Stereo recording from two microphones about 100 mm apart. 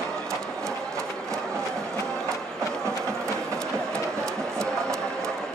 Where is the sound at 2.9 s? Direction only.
30° right (ahead or behind).